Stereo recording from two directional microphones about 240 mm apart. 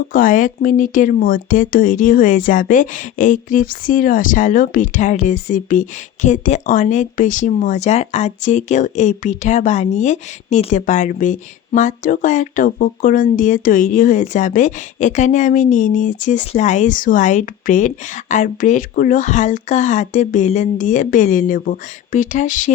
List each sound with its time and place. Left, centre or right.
0.1 s speech: left